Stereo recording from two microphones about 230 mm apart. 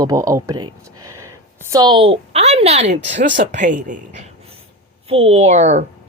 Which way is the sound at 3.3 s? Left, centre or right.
Right.